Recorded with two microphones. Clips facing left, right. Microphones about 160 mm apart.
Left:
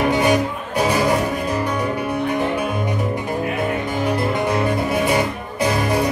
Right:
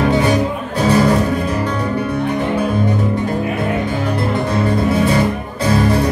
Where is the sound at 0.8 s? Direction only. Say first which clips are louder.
Right 6 dB; 15° left (ahead or behind).